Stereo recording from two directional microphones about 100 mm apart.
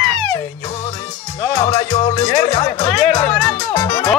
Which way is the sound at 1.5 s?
45° left (ahead or behind).